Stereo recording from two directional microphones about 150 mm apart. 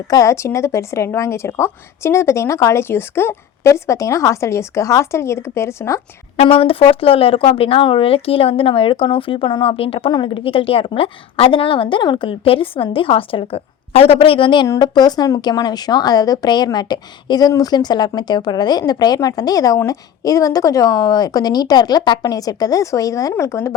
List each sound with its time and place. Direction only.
0.1 s a woman's voice: 20° left (ahead or behind)
6.3 s a woman's voice: 40° left (ahead or behind); by 23.7 s 20° left (ahead or behind)